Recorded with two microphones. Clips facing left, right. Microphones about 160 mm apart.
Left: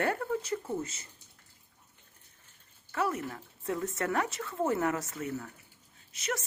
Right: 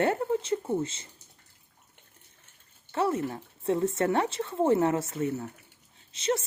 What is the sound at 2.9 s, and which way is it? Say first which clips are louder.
Speech: right 5 dB; 25° right (ahead or behind).